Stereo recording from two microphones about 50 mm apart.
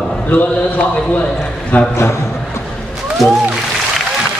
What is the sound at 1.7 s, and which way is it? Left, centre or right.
Speech, left.